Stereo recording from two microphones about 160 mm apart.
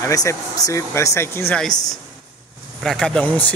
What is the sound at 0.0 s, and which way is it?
Speech, 20° left (ahead or behind).